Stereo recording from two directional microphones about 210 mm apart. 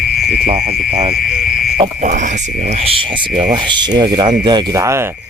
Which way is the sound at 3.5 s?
20° right (ahead or behind).